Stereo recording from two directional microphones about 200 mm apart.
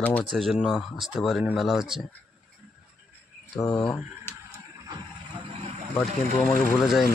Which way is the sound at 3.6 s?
10° left (ahead or behind).